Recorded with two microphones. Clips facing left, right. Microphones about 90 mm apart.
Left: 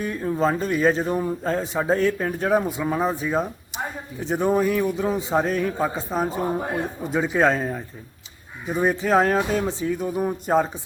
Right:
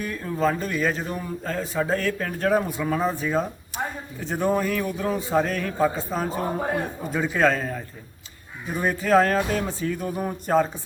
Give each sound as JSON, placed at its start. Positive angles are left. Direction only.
{"t": 0.0, "sound": "a man's voice", "side_deg": 25}